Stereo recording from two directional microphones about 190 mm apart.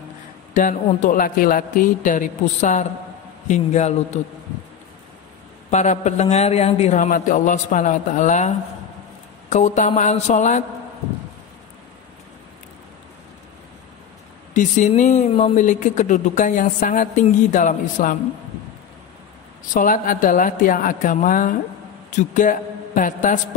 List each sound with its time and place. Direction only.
0.6 s a man's voice: 40° left (ahead or behind)
5.7 s speech: 40° left (ahead or behind)
14.5 s speech: 40° left (ahead or behind)
19.7 s a man's voice: 45° left (ahead or behind)